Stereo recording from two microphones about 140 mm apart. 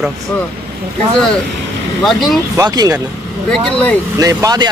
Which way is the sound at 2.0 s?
Centre (ahead or behind).